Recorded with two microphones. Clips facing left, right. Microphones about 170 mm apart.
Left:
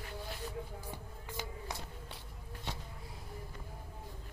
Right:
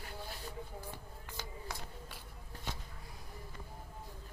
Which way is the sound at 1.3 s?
20° left (ahead or behind).